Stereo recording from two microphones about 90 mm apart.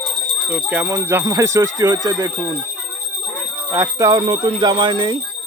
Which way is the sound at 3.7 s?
35° right (ahead or behind).